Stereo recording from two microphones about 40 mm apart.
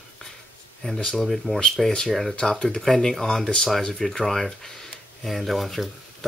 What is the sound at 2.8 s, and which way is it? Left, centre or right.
Speech, centre.